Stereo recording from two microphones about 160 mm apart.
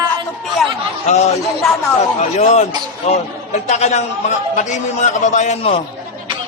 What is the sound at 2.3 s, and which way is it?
A man's voice, 45° left (ahead or behind).